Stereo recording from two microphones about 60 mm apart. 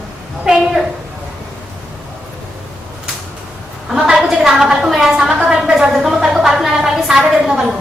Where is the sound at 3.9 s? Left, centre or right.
Centre.